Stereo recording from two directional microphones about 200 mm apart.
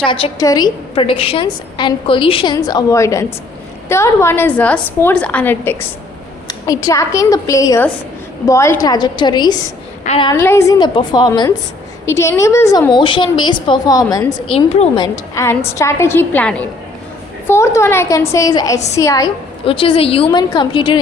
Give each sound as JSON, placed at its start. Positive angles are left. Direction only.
{"t": 0.1, "sound": "a woman's voice", "side_deg": 20}
{"t": 6.8, "sound": "a woman's voice", "side_deg": 15}
{"t": 10.0, "sound": "a woman's voice", "side_deg": 35}
{"t": 10.3, "sound": "a woman's voice", "side_deg": 10}